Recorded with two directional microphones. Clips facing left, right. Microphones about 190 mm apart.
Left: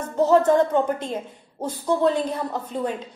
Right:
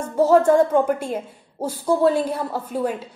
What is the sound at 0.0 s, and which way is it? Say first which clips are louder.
Speech: right 2 dB; 10° right (ahead or behind).